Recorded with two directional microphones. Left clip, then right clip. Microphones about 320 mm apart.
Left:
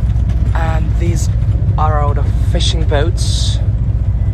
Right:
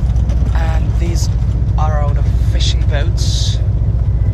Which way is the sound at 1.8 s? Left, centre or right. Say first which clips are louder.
Left 5 dB; centre.